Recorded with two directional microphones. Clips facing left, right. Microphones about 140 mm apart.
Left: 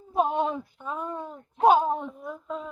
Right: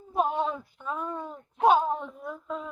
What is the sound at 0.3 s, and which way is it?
A woman's voice, 20° left (ahead or behind).